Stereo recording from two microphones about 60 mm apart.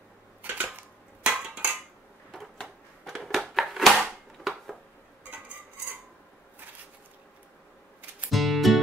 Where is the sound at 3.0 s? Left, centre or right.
Centre.